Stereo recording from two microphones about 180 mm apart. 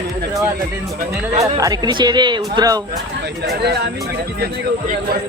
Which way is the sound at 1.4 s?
20° right (ahead or behind).